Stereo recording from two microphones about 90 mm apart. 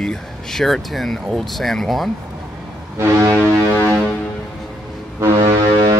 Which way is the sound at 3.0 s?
30° right (ahead or behind).